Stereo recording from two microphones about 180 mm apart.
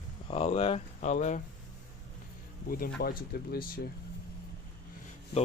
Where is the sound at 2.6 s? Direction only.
55° left (ahead or behind).